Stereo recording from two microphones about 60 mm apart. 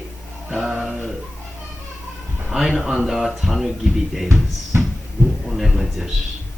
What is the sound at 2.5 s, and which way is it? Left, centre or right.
Speech, centre.